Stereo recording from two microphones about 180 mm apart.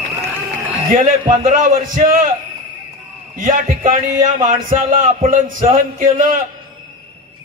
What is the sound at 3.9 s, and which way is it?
A man's voice, 45° right (ahead or behind).